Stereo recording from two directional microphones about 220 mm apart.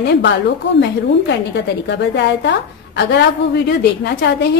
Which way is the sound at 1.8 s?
50° left (ahead or behind).